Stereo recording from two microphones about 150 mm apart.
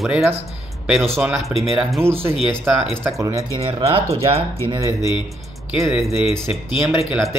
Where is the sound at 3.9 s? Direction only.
40° right (ahead or behind).